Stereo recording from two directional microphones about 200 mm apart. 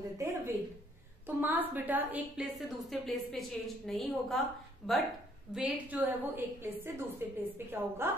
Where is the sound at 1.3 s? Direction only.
10° right (ahead or behind).